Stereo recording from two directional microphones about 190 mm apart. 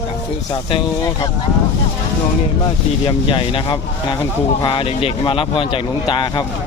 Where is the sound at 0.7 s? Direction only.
20° left (ahead or behind).